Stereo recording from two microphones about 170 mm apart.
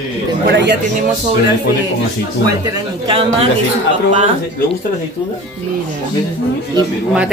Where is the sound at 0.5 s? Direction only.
80° right.